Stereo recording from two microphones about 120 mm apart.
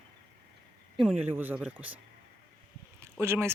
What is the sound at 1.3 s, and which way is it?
Speech, 15° right (ahead or behind).